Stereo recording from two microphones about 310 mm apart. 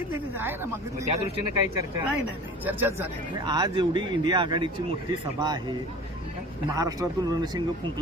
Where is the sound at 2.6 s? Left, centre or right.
Centre.